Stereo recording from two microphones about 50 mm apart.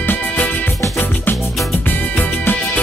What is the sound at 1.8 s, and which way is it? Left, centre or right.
Music, left.